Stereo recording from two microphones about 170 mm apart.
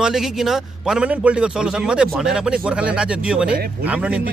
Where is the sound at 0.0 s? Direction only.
5° right (ahead or behind).